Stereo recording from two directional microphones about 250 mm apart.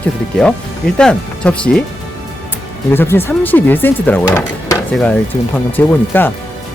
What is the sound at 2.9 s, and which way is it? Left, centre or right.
Speech, centre.